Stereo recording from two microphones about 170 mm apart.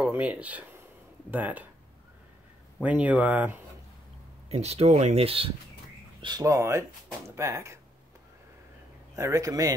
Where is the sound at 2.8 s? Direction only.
10° right (ahead or behind).